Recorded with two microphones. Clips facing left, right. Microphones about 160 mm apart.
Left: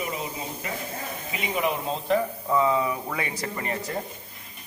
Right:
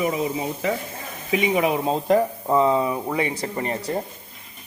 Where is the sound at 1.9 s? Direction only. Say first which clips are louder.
Right 5 dB; 45° right (ahead or behind).